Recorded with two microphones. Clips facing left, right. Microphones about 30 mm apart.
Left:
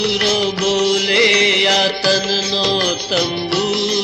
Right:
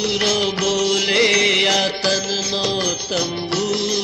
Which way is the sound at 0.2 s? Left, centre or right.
Centre.